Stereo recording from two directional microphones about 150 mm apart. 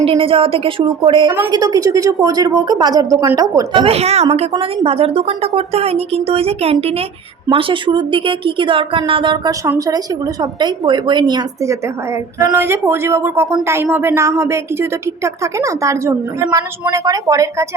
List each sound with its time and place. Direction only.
0.0 s a woman's voice: 40° right (ahead or behind)
3.8 s a woman's voice: 45° right (ahead or behind)
4.5 s a woman's voice: 35° right (ahead or behind)